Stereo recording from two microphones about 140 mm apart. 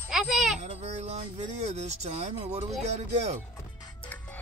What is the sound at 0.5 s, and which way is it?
Speech, 55° right (ahead or behind).